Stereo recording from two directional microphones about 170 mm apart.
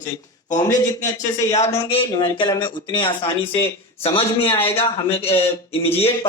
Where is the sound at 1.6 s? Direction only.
15° left (ahead or behind).